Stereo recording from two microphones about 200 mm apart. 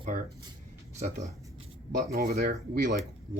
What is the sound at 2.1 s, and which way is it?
Speech, 50° right (ahead or behind).